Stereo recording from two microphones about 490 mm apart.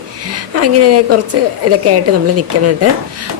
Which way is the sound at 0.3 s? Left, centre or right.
Right.